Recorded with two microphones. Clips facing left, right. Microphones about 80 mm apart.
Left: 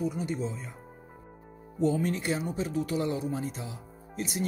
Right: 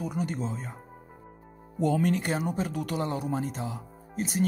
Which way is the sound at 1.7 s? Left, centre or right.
Right.